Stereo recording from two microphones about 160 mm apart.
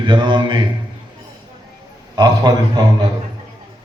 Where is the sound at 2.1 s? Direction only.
25° right (ahead or behind).